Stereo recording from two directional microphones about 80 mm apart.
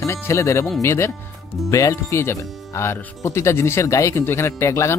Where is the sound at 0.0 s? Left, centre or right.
Left.